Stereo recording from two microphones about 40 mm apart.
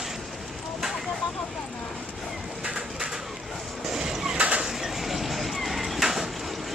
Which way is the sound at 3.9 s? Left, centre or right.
Centre.